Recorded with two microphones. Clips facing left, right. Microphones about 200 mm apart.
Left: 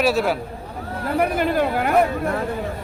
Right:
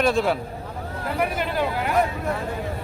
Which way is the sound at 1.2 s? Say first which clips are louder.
Left 4 dB; 50° left (ahead or behind).